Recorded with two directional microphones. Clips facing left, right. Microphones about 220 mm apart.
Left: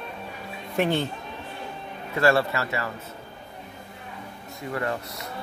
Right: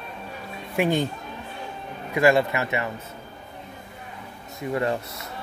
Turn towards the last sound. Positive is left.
turn(degrees=-25)  # may be behind; listen again after turning